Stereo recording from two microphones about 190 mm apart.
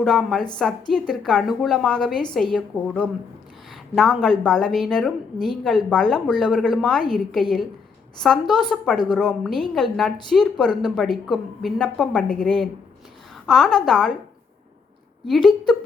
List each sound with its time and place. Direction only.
0.0 s a woman's voice: 5° left (ahead or behind)
15.3 s a woman's voice: centre (ahead or behind)